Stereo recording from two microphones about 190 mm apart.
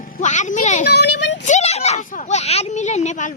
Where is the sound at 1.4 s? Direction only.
35° left (ahead or behind).